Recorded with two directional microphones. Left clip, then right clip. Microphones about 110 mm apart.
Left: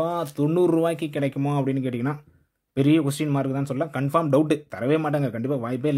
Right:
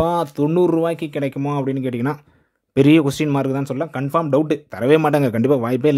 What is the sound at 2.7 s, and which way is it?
Speech, 50° right (ahead or behind).